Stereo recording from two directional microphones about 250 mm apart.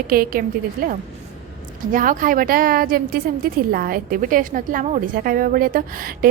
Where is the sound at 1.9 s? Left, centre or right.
Right.